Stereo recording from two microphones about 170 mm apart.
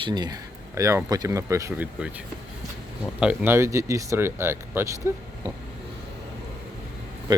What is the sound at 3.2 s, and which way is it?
Speech, 10° right (ahead or behind).